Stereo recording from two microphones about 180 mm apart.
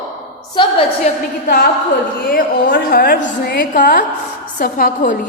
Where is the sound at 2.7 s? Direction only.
60° left (ahead or behind).